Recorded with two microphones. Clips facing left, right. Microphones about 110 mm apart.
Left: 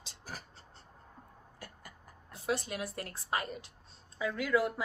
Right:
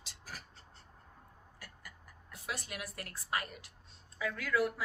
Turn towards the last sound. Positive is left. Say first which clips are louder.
# left 3 dB
turn(degrees=25)  # may be behind; listen again after turning